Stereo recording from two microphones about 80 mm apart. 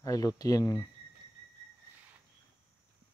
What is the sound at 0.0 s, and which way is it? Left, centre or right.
Speech, left.